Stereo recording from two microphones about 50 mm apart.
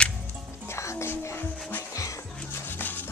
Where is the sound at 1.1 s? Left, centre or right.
Left.